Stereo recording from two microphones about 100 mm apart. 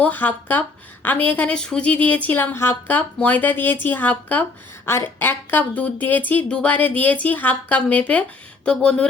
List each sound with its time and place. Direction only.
0.0 s speech: 15° left (ahead or behind)